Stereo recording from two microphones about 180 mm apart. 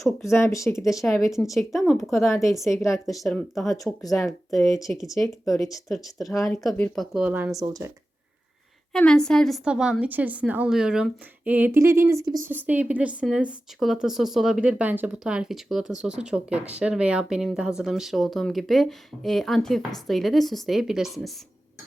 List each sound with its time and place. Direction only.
0.2 s speech: 15° left (ahead or behind)
1.0 s speech: centre (ahead or behind); by 5.8 s 20° left (ahead or behind)
5.9 s a woman's voice: centre (ahead or behind); by 7.9 s 15° right (ahead or behind)
8.9 s a woman's voice: 5° left (ahead or behind)